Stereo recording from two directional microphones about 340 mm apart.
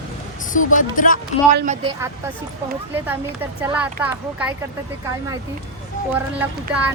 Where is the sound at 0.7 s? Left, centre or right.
Left.